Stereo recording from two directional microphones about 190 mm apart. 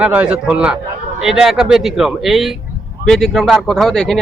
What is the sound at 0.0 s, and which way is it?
Speech, 5° right (ahead or behind).